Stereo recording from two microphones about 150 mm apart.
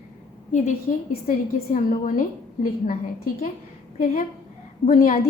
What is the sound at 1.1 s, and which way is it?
A woman's voice, 65° left (ahead or behind).